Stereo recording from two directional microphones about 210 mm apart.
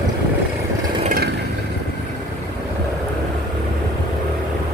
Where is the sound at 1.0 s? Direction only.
40° right (ahead or behind).